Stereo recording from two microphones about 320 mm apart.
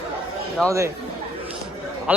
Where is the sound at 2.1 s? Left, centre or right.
Centre.